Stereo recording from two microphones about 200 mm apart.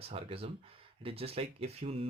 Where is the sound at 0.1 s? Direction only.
30° right (ahead or behind).